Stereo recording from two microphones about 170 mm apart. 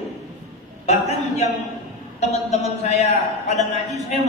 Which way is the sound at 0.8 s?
40° left (ahead or behind).